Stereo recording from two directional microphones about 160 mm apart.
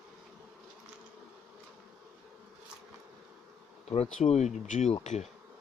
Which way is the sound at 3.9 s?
40° left (ahead or behind).